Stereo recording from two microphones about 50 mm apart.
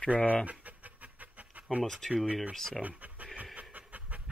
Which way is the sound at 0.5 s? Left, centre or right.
Right.